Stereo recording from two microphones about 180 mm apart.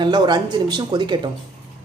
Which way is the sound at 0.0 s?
25° right (ahead or behind).